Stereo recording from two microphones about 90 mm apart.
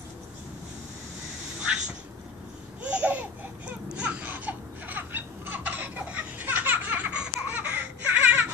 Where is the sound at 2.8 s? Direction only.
15° right (ahead or behind).